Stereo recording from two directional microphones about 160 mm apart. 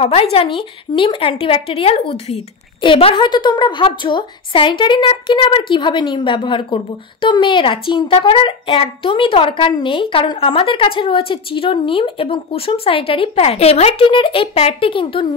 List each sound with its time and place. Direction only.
0.0 s a woman's voice: 35° left (ahead or behind)